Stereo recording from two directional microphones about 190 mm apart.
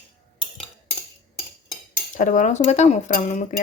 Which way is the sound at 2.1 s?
40° left (ahead or behind).